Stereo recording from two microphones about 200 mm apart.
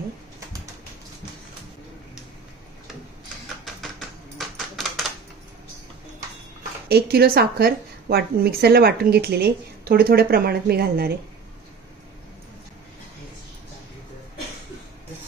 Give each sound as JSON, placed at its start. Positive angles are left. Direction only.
{"t": 6.9, "sound": "a woman's voice", "side_deg": -50}